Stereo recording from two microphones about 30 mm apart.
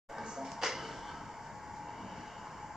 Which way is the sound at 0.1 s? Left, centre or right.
Centre.